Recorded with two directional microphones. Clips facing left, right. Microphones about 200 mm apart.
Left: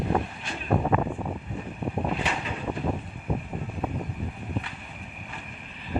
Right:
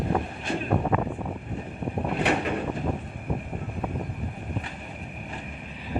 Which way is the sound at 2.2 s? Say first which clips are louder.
Right 7 dB; 60° right (ahead or behind).